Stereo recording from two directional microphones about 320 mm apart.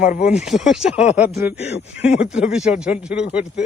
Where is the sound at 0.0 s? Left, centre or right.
Left.